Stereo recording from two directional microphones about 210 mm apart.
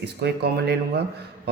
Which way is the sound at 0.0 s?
55° right (ahead or behind).